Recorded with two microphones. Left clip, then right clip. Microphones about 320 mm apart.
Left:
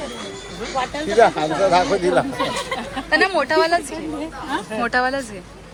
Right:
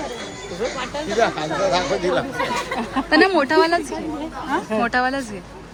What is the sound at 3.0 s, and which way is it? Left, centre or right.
Speech, centre.